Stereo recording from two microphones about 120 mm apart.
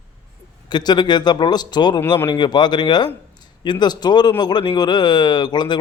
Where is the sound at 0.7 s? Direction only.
35° left (ahead or behind).